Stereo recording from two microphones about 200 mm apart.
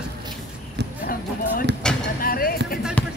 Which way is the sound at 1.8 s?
5° left (ahead or behind).